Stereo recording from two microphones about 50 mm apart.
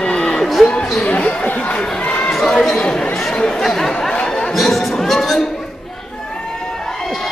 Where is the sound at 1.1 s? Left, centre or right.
Left.